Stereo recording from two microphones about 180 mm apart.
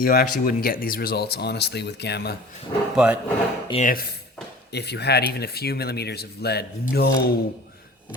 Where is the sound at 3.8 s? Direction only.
55° left (ahead or behind).